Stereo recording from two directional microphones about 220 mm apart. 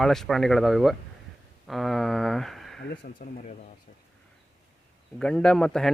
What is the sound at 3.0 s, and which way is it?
Speech, 35° left (ahead or behind).